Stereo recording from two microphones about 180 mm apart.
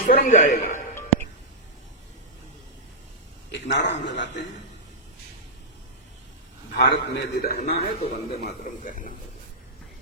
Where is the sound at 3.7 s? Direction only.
85° left.